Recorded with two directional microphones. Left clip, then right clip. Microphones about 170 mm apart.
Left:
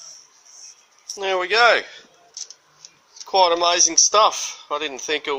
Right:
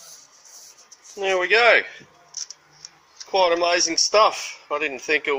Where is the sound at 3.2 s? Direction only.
25° left (ahead or behind).